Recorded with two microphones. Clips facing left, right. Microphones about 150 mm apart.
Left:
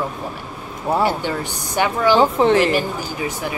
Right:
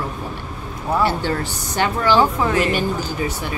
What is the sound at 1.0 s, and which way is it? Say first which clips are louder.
Speech: even; 15° left (ahead or behind).